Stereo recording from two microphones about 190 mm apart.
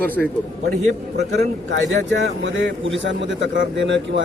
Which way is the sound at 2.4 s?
75° right (ahead or behind).